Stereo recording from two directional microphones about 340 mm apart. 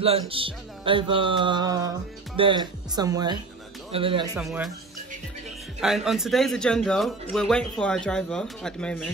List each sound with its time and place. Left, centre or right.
0.0 s music: centre
4.4 s a man's voice: centre
5.8 s a man's voice: centre